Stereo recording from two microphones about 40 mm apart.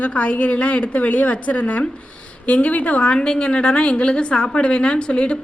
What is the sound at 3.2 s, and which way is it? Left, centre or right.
A woman's voice, left.